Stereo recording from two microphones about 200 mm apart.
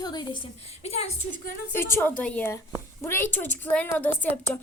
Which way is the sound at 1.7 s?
10° left (ahead or behind).